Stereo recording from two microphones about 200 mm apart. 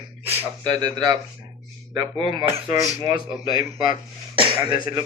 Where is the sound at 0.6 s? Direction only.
20° right (ahead or behind).